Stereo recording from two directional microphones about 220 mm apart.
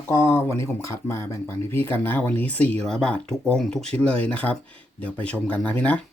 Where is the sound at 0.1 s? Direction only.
10° left (ahead or behind).